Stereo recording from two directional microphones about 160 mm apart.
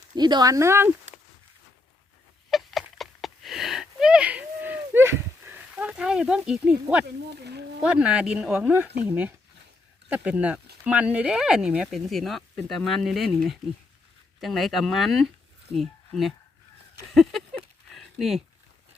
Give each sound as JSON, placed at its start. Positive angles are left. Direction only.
{"t": 0.2, "sound": "speech", "side_deg": -25}
{"t": 2.5, "sound": "a sound", "side_deg": 0}
{"t": 7.0, "sound": "speech", "side_deg": -90}
{"t": 7.8, "sound": "speech", "side_deg": -5}
{"t": 14.4, "sound": "speech", "side_deg": 0}
{"t": 17.1, "sound": "a sound", "side_deg": 0}